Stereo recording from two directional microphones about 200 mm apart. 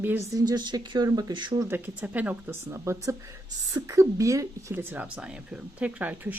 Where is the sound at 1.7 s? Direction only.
10° right (ahead or behind).